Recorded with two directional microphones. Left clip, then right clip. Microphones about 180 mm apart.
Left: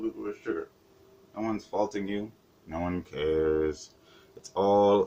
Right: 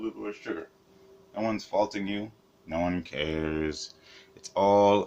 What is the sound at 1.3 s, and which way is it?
Speech, 25° right (ahead or behind).